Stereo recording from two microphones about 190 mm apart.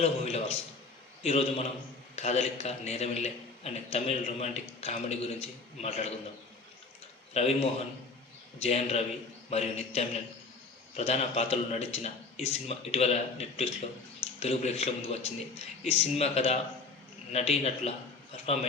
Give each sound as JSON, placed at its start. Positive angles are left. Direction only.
{"t": 0.0, "sound": "a man's voice", "side_deg": 35}
{"t": 7.3, "sound": "a man's voice", "side_deg": 30}